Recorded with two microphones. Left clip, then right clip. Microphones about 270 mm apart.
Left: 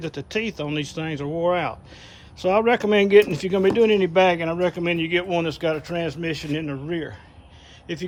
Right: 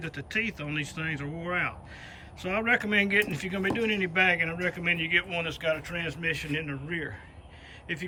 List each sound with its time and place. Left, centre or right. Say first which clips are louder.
0.0 s speech: left 4 dB; centre